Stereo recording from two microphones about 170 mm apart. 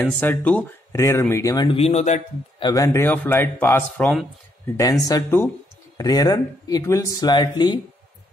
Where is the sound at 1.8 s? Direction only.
40° left (ahead or behind).